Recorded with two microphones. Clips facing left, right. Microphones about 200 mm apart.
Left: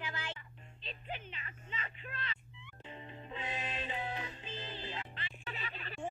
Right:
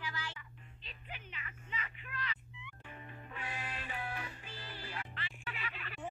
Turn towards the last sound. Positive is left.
turn(degrees=25)  # may be behind; listen again after turning